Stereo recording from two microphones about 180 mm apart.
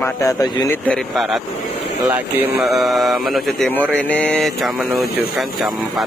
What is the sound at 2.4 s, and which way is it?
Speech, 5° right (ahead or behind).